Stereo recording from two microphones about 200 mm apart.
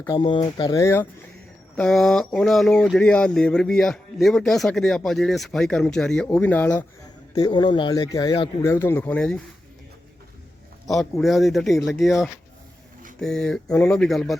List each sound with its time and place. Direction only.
0.0 s speech: 20° left (ahead or behind)
1.7 s speech: centre (ahead or behind)
7.3 s speech: 20° left (ahead or behind); by 9.4 s 5° left (ahead or behind)
11.2 s speech: centre (ahead or behind)